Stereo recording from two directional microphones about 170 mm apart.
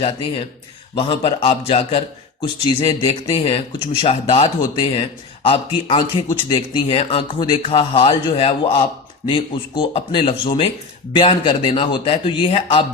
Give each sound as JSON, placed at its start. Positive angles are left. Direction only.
{"t": 0.9, "sound": "speech", "side_deg": 30}